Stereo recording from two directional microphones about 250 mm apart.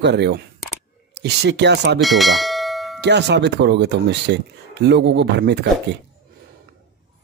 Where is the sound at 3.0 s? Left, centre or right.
Right.